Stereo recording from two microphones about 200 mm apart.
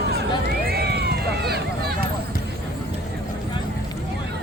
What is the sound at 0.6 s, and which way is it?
Run, 50° right (ahead or behind).